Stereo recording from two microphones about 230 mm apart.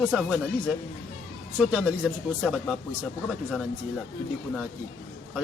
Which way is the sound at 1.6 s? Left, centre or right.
Centre.